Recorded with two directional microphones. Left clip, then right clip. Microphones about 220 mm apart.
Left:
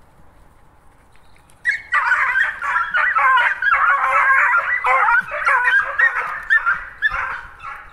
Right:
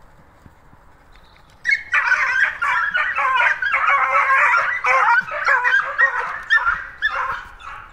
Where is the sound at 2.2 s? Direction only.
40° right (ahead or behind).